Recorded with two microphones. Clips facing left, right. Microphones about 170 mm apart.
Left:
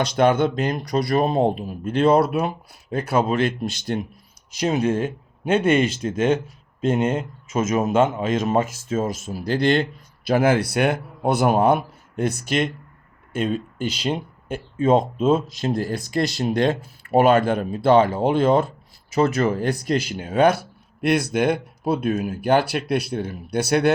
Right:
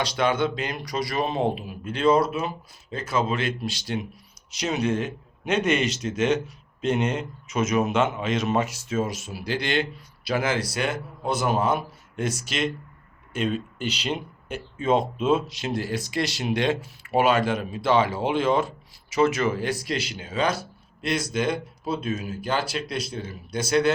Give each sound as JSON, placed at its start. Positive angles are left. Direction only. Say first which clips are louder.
{"t": 0.0, "sound": "speech", "louder": "left 5 dB", "side_deg": 50}